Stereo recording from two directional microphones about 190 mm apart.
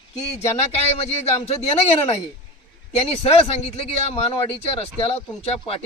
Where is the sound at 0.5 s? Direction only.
35° left (ahead or behind).